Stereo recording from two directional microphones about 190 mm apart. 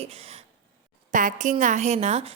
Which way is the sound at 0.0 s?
30° right (ahead or behind).